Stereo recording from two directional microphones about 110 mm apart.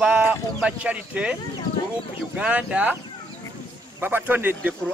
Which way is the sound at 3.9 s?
20° right (ahead or behind).